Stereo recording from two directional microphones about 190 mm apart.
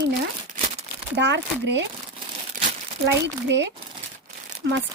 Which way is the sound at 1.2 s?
65° right (ahead or behind).